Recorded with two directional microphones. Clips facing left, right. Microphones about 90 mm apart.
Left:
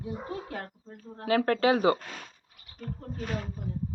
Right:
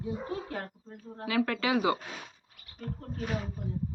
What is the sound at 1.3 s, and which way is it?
Speech, 40° left (ahead or behind).